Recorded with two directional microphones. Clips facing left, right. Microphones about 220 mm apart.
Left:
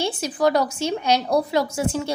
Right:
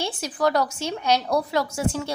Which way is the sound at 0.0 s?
20° left (ahead or behind).